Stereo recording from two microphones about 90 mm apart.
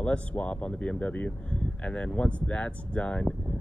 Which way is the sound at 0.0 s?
15° left (ahead or behind).